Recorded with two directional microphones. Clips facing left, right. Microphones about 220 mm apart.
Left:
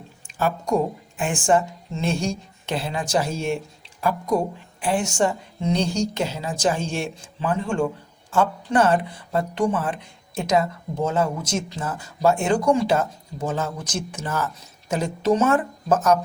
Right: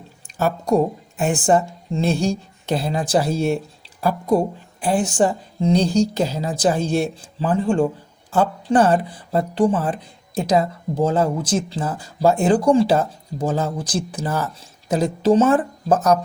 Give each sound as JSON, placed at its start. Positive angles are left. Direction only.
{"t": 0.3, "sound": "speech", "side_deg": -40}
{"t": 4.8, "sound": "speech", "side_deg": -35}